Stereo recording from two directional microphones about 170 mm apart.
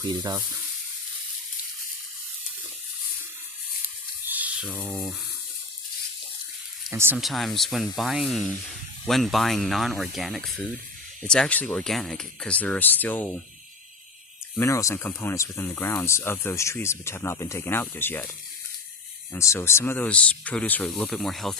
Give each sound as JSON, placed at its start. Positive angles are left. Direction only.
{"t": 0.0, "sound": "speech", "side_deg": -20}
{"t": 4.3, "sound": "speech", "side_deg": -10}
{"t": 6.9, "sound": "speech", "side_deg": -15}
{"t": 7.2, "sound": "speech", "side_deg": 0}
{"t": 14.5, "sound": "speech", "side_deg": 15}
{"t": 19.3, "sound": "speech", "side_deg": 15}